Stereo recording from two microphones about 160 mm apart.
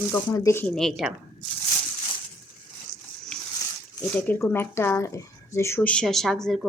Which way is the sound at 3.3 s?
5° left (ahead or behind).